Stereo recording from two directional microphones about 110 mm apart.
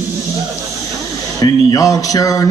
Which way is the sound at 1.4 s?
35° left (ahead or behind).